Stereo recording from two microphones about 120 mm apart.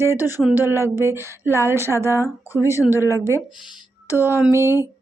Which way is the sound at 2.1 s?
25° left (ahead or behind).